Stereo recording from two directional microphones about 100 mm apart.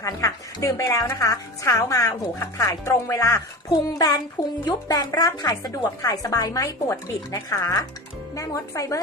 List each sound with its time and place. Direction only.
0.0 s a woman's voice: 35° left (ahead or behind)
3.7 s a woman's voice: 40° left (ahead or behind)